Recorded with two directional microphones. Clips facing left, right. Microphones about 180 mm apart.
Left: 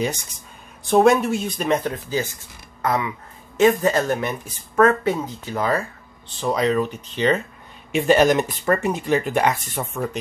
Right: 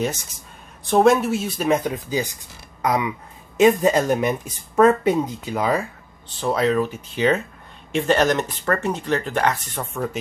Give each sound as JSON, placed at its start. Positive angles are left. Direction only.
{"t": 0.8, "sound": "speech", "side_deg": 0}
{"t": 7.9, "sound": "speech", "side_deg": 10}